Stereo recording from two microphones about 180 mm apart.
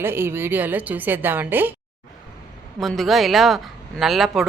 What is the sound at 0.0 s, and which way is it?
A woman's voice, 10° right (ahead or behind).